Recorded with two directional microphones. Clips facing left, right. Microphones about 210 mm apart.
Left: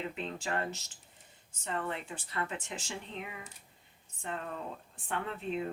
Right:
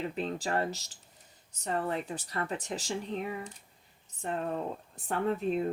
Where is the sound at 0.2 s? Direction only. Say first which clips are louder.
Right 6 dB; 35° right (ahead or behind).